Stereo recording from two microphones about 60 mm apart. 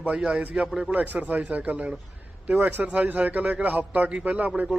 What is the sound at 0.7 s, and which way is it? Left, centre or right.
Speech, centre.